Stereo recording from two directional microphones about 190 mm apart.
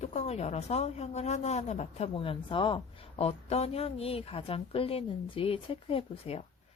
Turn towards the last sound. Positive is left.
turn(degrees=30)  # may be behind; listen again after turning